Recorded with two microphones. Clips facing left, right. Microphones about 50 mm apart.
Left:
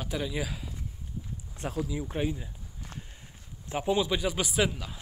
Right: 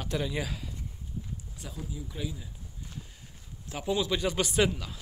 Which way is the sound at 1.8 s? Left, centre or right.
Left.